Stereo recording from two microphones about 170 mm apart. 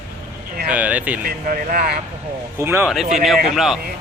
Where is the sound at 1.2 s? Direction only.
60° right (ahead or behind).